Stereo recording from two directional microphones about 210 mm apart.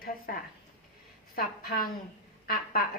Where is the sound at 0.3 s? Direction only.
40° left (ahead or behind).